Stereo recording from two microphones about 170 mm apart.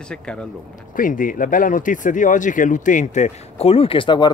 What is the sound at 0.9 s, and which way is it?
Speech, 55° left (ahead or behind).